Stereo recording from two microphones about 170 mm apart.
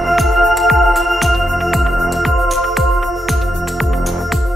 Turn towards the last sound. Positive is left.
turn(degrees=0)  # may be behind; listen again after turning